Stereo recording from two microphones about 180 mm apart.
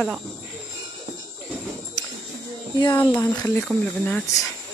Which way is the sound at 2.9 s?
15° left (ahead or behind).